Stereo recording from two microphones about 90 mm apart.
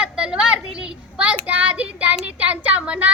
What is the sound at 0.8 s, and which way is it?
Child singing, 15° right (ahead or behind).